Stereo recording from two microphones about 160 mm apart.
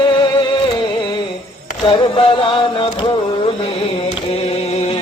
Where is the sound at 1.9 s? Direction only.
35° left (ahead or behind).